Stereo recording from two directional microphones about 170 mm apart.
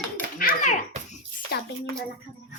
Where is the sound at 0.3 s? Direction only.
50° left (ahead or behind).